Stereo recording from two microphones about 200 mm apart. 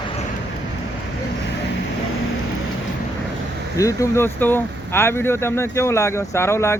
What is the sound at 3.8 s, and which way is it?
Speech, 15° left (ahead or behind).